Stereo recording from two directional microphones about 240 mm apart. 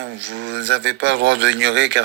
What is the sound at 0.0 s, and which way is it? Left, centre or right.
Speech, right.